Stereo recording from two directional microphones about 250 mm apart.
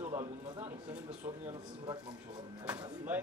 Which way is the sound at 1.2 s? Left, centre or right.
Right.